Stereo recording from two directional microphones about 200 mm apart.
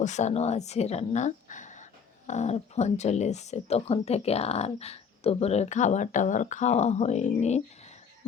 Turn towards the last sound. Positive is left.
turn(degrees=35)  # may be behind; listen again after turning